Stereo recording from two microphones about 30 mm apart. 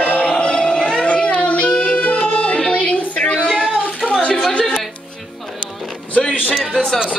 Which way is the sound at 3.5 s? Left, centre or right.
Centre.